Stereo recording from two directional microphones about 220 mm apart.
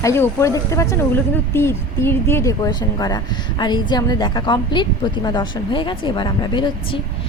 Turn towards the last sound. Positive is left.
turn(degrees=20)  # may be behind; listen again after turning